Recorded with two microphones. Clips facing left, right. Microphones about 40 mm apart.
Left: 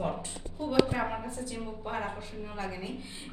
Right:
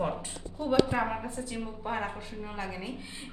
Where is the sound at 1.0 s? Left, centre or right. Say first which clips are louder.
Right 1 dB; centre.